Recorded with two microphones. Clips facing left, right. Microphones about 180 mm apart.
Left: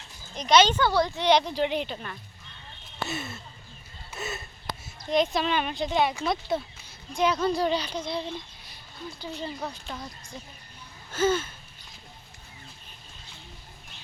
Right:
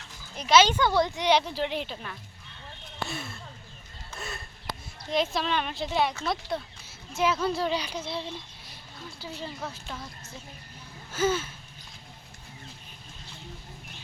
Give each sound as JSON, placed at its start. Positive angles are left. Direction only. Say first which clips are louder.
{"t": 0.3, "sound": "a woman's voice", "louder": "left 1 dB", "side_deg": -5}
{"t": 11.1, "sound": "speech", "louder": "left 2 dB", "side_deg": -10}